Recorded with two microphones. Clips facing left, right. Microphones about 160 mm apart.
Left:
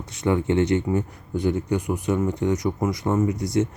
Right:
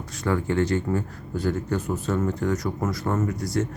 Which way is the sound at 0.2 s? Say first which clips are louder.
Left 3 dB; 20° left (ahead or behind).